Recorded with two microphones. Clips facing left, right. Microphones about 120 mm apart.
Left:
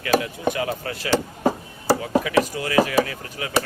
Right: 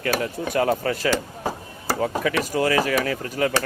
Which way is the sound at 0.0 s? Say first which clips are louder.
Left 3 dB; 45° right (ahead or behind).